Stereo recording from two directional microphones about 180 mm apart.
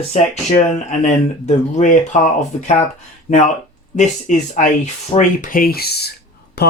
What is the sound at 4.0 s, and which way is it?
Speech, 45° left (ahead or behind).